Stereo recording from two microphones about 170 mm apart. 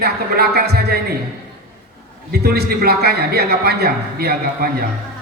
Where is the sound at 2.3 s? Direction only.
65° right (ahead or behind).